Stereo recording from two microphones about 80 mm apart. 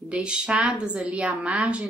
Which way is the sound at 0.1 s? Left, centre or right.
Centre.